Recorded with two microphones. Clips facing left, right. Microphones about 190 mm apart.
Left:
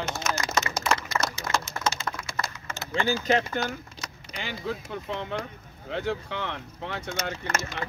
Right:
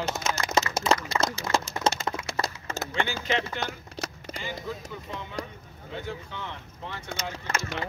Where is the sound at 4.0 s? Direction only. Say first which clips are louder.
Right 6 dB; 65° right (ahead or behind).